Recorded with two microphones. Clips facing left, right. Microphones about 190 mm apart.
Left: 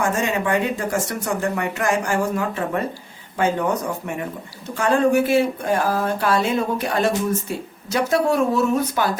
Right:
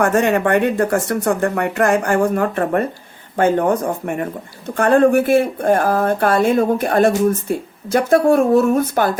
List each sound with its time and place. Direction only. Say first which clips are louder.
0.0 s speech: right 6 dB; 65° right (ahead or behind)